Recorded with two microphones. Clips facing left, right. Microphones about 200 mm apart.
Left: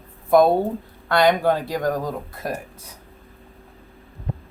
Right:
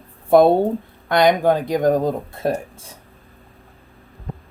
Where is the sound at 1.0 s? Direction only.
15° right (ahead or behind).